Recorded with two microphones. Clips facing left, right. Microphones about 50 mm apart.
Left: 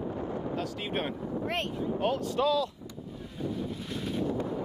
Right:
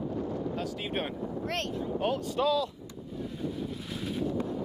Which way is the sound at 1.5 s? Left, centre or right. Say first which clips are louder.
Even; centre.